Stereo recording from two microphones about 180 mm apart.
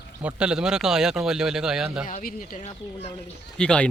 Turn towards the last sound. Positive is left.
turn(degrees=5)  # may be behind; listen again after turning